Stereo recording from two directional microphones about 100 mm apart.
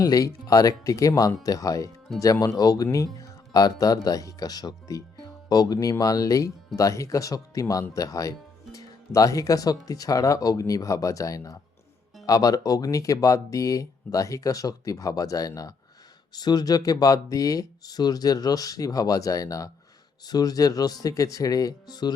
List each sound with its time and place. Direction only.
0.0 s speech: 35° left (ahead or behind)